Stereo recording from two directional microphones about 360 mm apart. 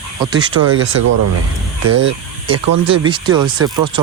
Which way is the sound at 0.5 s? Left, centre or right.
Right.